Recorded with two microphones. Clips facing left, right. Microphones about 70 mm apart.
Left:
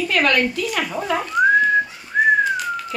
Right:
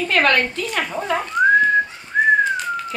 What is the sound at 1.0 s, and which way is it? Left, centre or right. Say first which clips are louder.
Whistling: even; centre.